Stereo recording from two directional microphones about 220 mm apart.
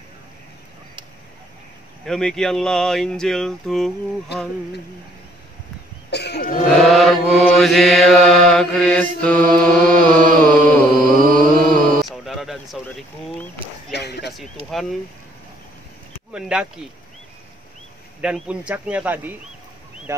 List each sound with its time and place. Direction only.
2.0 s mantra: centre (ahead or behind)
6.0 s speech: 50° left (ahead or behind)
6.8 s mantra: centre (ahead or behind)
11.3 s music: 5° left (ahead or behind)
13.9 s speech: 50° left (ahead or behind)
14.7 s mantra: centre (ahead or behind)
16.3 s mantra: 5° right (ahead or behind)
18.2 s mantra: 5° right (ahead or behind)
20.1 s speech: 10° right (ahead or behind)